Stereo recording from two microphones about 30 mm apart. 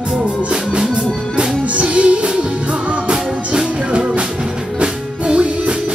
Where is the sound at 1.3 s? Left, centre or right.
Right.